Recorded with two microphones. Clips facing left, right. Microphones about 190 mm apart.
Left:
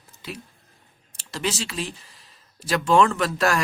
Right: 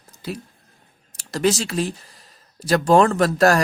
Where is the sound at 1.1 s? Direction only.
45° right (ahead or behind).